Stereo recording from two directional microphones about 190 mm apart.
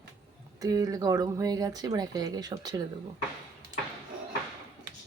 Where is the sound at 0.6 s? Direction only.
20° right (ahead or behind).